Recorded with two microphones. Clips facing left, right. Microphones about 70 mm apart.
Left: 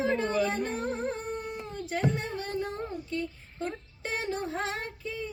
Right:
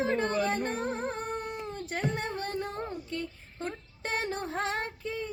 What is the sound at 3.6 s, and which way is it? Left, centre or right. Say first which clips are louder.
Child singing: left 1 dB; right.